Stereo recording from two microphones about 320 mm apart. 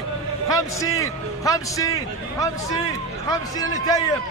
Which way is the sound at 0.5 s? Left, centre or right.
Centre.